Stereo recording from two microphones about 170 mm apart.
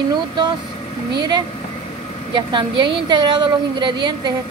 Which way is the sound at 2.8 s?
30° right (ahead or behind).